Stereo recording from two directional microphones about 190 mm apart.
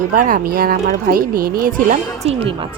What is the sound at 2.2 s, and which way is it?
Speech, 30° right (ahead or behind).